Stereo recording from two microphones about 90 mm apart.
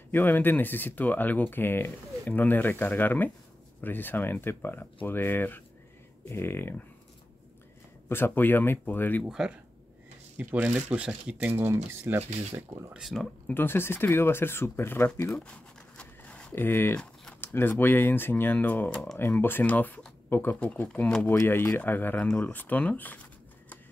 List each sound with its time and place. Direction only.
0.1 s speech: 20° left (ahead or behind)
8.1 s speech: 25° left (ahead or behind)
9.2 s speech: 10° right (ahead or behind)
11.5 s speech: 30° right (ahead or behind)
12.9 s speech: centre (ahead or behind)
13.5 s speech: 25° left (ahead or behind)
15.4 s a sound: 10° left (ahead or behind)
16.5 s speech: 25° left (ahead or behind)
16.9 s typing: 10° left (ahead or behind)
17.4 s speech: 25° left (ahead or behind)
20.5 s speech: 15° left (ahead or behind)